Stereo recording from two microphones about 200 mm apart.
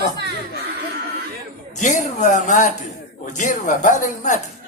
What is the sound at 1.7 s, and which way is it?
Speech, 40° left (ahead or behind).